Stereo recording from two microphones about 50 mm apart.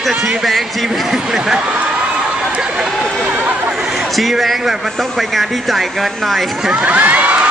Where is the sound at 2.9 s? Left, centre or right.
Centre.